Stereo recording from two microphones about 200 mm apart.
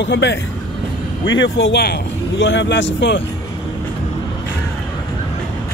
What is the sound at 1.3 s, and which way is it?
Speech, 70° left (ahead or behind).